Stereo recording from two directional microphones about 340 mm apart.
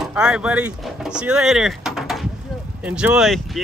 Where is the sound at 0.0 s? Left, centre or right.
Centre.